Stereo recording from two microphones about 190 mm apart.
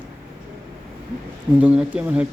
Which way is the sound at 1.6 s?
5° right (ahead or behind).